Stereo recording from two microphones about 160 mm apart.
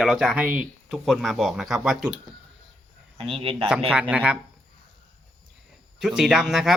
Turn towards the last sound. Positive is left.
turn(degrees=-5)  # may be behind; listen again after turning